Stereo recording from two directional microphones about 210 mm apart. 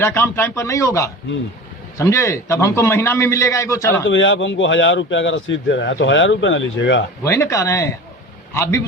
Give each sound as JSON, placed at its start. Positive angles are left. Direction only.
{"t": 0.0, "sound": "a man's voice", "side_deg": 10}
{"t": 4.1, "sound": "speech", "side_deg": 60}
{"t": 7.3, "sound": "a man's voice", "side_deg": 15}